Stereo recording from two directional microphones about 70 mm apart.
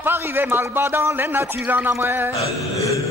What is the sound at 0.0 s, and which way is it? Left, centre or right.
A man's voice, right.